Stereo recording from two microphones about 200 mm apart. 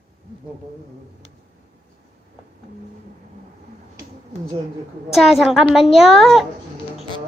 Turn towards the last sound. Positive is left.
turn(degrees=0)  # may be behind; listen again after turning